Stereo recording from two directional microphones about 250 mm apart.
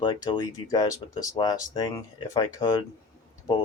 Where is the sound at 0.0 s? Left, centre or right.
Centre.